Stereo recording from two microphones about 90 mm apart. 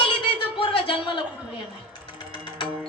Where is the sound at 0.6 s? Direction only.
90° left.